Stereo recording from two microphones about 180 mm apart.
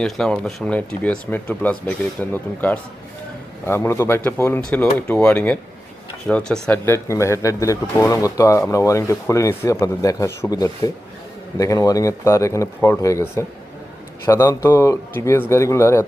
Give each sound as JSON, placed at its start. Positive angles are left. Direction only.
{"t": 0.0, "sound": "speech", "side_deg": 5}